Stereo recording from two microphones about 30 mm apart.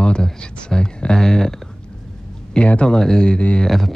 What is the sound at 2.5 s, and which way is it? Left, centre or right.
Speech, left.